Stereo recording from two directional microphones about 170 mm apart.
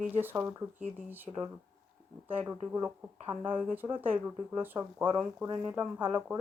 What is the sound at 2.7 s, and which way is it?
Speech, 10° right (ahead or behind).